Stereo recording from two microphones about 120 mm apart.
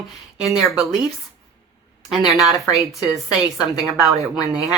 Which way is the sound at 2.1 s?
Centre (ahead or behind).